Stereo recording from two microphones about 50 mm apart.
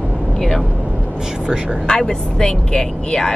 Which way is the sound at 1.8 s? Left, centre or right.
Centre.